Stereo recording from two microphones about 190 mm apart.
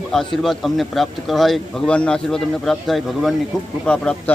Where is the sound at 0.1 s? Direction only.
Centre (ahead or behind).